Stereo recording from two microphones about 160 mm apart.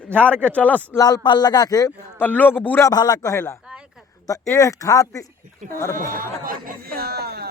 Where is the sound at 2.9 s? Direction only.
25° left (ahead or behind).